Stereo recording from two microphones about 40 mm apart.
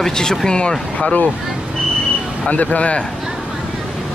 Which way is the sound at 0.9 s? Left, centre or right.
Left.